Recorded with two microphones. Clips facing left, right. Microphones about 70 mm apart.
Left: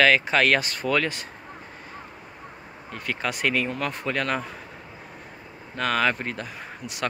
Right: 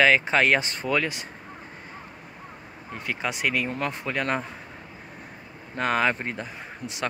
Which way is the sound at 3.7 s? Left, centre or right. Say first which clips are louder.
Left 1 dB; right.